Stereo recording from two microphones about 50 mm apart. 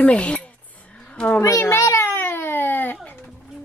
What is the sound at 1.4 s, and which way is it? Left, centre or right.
Speech, left.